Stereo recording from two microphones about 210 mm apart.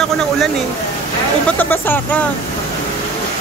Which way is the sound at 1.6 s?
10° left (ahead or behind).